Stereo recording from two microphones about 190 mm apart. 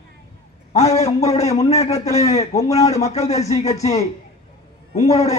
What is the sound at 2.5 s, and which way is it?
Speech, 15° left (ahead or behind).